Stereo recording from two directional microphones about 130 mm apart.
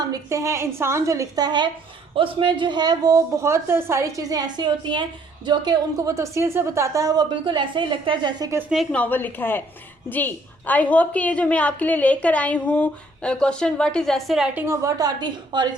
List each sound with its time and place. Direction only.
0.0 s a woman's voice: 25° right (ahead or behind)
8.7 s a woman's voice: centre (ahead or behind)
9.0 s a woman's voice: 15° left (ahead or behind); by 14.6 s 5° right (ahead or behind)
14.7 s a woman's voice: 25° right (ahead or behind)